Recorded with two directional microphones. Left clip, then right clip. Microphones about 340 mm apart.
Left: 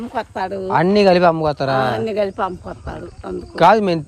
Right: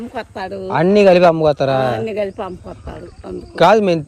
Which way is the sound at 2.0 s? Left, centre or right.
Left.